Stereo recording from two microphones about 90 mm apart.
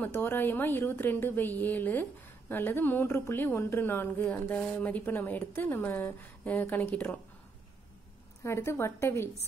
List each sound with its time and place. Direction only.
0.0 s a woman's voice: 25° left (ahead or behind)
8.5 s a woman's voice: 30° left (ahead or behind)